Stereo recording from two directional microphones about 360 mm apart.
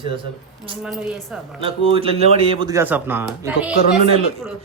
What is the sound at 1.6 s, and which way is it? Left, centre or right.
Speech, centre.